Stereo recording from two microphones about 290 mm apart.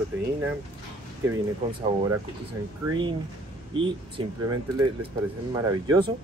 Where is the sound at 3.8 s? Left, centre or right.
Centre.